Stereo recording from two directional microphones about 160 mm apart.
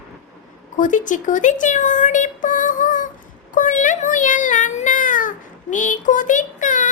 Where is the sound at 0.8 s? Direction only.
50° left (ahead or behind).